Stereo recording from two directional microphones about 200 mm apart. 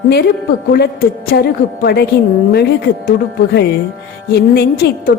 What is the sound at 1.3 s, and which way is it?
Speech, 50° left (ahead or behind).